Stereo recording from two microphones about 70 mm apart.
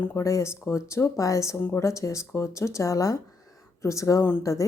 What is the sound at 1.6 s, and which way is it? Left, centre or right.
Speech, left.